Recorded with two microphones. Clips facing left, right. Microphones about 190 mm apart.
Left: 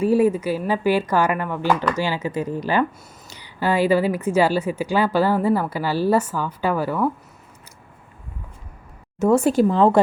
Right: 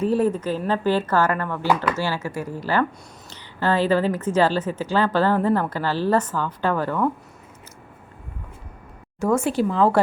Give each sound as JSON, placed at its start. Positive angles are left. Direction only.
{"t": 0.0, "sound": "a woman's voice", "side_deg": 10}
{"t": 9.3, "sound": "speech", "side_deg": 40}
{"t": 9.7, "sound": "speech", "side_deg": 25}